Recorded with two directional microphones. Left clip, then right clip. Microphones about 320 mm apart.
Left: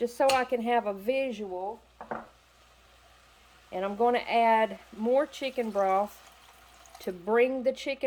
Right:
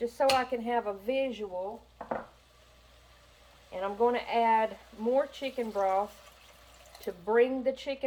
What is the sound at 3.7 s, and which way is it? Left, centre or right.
Speech, left.